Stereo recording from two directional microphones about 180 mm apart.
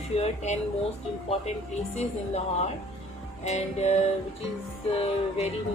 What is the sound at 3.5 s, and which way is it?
Speech, 40° left (ahead or behind).